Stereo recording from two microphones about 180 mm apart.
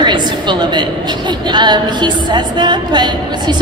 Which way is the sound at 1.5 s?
25° right (ahead or behind).